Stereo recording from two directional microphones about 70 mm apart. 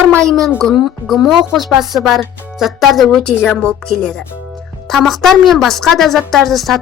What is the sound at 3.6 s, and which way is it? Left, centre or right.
Speech, centre.